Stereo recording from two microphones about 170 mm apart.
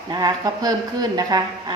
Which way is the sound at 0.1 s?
20° right (ahead or behind).